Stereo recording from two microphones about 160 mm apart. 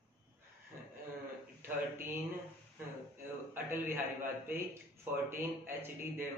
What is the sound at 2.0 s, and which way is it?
Speech, 15° right (ahead or behind).